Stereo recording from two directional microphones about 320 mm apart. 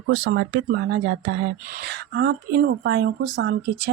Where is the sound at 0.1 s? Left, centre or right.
Right.